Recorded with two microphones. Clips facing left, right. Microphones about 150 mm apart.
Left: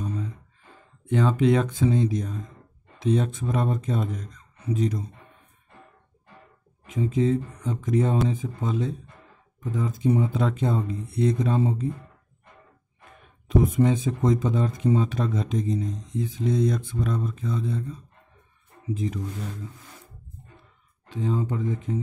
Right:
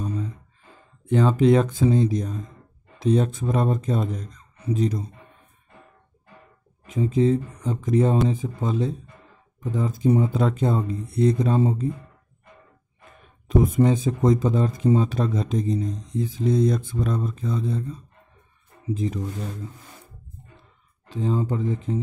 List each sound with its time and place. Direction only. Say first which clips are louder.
1.0 s speech: right 3 dB; 35° right (ahead or behind)
6.9 s speech: right 3 dB; 35° right (ahead or behind)
13.5 s speech: right 2 dB; 40° right (ahead or behind)
21.1 s speech: right 2 dB; 35° right (ahead or behind)